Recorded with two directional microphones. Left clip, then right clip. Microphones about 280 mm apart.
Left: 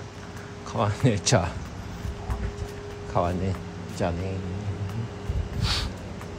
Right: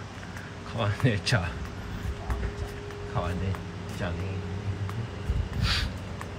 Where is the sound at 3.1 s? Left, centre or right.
Centre.